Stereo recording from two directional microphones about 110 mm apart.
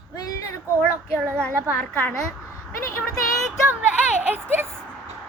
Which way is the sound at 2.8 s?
25° left (ahead or behind).